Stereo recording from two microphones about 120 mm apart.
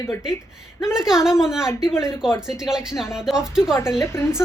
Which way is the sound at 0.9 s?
5° right (ahead or behind).